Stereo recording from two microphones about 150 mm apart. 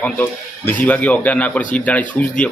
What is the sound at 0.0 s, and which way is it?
A man's voice, 10° left (ahead or behind).